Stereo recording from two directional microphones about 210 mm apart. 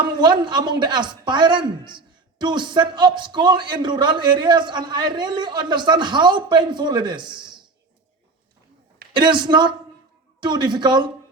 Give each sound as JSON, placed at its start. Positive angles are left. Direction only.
{"t": 0.0, "sound": "speech", "side_deg": -20}
{"t": 9.1, "sound": "speech", "side_deg": -20}